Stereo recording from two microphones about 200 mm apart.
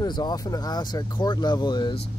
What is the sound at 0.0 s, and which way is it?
Speech, 20° left (ahead or behind).